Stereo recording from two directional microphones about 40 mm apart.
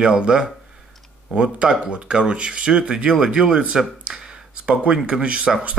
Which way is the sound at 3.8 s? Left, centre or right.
Centre.